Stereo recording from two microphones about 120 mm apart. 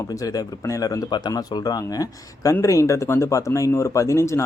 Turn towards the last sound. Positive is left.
turn(degrees=25)  # may be behind; listen again after turning